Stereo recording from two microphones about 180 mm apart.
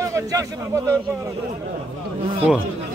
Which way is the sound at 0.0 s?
20° right (ahead or behind).